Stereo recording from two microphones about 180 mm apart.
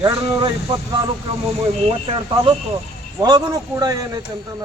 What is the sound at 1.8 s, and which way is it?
Speech, 30° right (ahead or behind).